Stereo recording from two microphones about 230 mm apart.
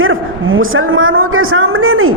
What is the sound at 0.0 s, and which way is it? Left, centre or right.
A woman's voice, right.